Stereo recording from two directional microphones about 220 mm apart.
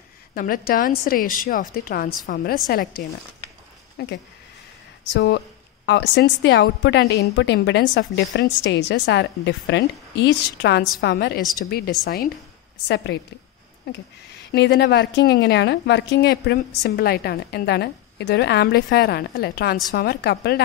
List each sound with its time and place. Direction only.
0.3 s a woman's voice: 40° left (ahead or behind)
4.0 s a woman's voice: 45° left (ahead or behind)
12.8 s a woman's voice: 50° left (ahead or behind)
14.5 s a woman's voice: 50° left (ahead or behind)